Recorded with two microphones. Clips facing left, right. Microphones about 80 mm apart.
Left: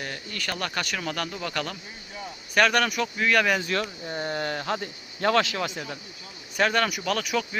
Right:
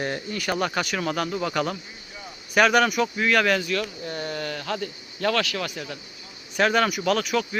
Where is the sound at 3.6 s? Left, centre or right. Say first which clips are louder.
Right 1 dB; left.